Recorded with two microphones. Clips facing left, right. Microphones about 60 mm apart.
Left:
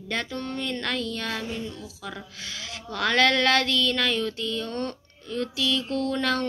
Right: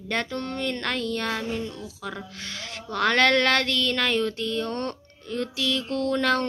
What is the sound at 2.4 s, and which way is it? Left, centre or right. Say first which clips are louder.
Speech: right 1 dB; right.